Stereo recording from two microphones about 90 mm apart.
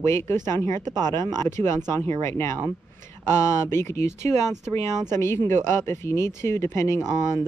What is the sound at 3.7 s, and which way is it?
Speech, 30° left (ahead or behind).